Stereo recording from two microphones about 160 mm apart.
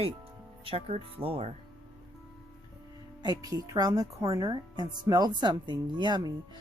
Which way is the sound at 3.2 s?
25° right (ahead or behind).